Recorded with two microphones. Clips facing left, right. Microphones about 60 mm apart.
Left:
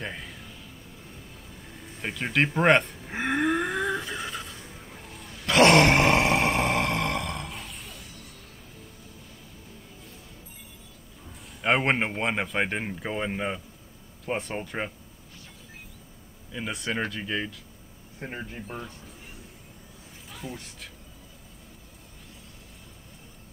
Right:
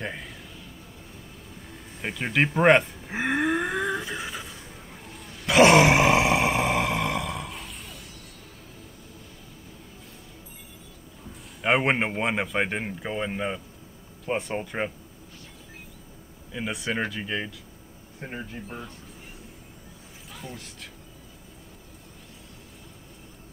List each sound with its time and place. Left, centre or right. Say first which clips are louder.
0.0 s a sound: right 2 dB; centre
2.0 s cattle: right 1 dB; centre
5.0 s grunt: right 1 dB; centre
11.6 s speech: right 1 dB; centre
16.5 s speech: right 1 dB; centre
20.2 s speech: left 1 dB; centre